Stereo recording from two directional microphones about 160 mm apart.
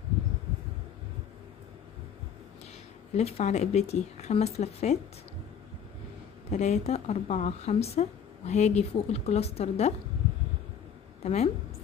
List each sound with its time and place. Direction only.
3.2 s speech: 40° left (ahead or behind)
6.5 s speech: 45° left (ahead or behind)
11.2 s a woman's voice: 40° left (ahead or behind)